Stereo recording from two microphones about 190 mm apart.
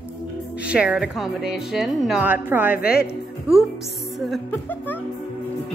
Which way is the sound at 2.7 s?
55° left (ahead or behind).